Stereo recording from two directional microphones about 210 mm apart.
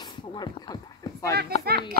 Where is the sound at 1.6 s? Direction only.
45° right (ahead or behind).